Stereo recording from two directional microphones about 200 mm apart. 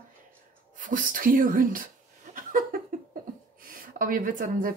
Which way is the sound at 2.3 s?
45° right (ahead or behind).